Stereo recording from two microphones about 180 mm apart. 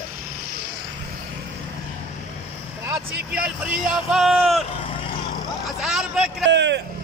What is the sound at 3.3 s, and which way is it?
Speech, 5° right (ahead or behind).